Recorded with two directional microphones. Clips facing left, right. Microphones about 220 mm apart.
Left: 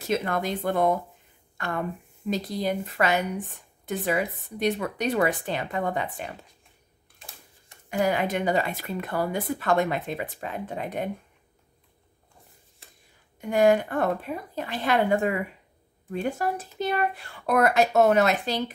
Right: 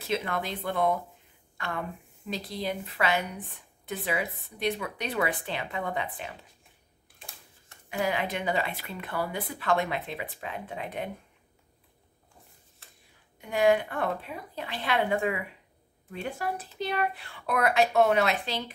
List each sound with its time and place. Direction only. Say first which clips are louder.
0.0 s speech: left 4 dB; 45° left (ahead or behind)
2.2 s speech: left 6 dB; 45° left (ahead or behind)
7.9 s speech: left 5 dB; 45° left (ahead or behind)
13.4 s speech: left 3 dB; 45° left (ahead or behind)